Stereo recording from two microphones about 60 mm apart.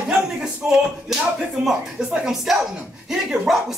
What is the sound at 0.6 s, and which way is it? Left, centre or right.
Speech, right.